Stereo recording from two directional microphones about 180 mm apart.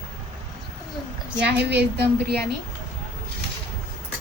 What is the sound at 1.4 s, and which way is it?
A woman's voice, 70° right (ahead or behind).